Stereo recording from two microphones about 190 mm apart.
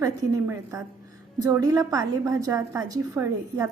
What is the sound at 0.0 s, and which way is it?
A woman's voice, 15° right (ahead or behind).